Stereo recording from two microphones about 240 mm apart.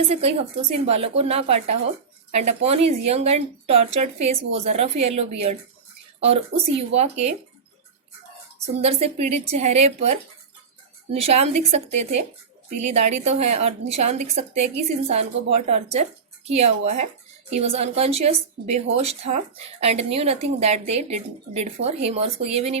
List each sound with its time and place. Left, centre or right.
0.1 s speech: right
8.8 s speech: right